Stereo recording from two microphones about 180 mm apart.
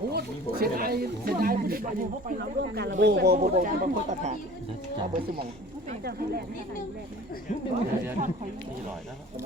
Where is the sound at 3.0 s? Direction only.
70° right (ahead or behind); by 4.3 s 45° right (ahead or behind).